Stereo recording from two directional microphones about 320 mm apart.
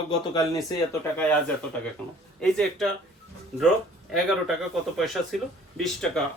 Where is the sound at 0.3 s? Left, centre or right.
Centre.